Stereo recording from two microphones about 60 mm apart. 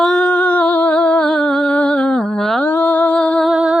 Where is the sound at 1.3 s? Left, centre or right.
Centre.